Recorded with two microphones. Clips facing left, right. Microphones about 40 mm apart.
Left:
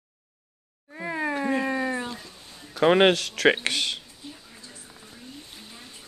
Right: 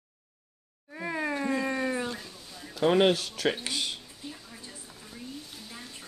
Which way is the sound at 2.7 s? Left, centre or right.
Left.